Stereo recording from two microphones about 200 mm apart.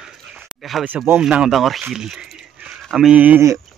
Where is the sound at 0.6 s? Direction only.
Centre (ahead or behind).